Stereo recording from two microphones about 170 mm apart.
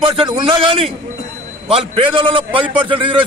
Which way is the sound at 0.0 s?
30° right (ahead or behind).